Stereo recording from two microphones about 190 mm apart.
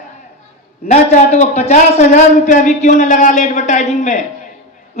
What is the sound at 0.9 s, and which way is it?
A woman's voice, 35° left (ahead or behind).